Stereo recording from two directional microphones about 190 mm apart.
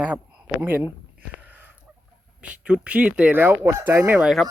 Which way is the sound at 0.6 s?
10° right (ahead or behind).